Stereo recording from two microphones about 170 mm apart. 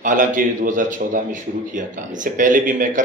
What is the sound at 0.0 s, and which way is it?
Speech, 50° right (ahead or behind).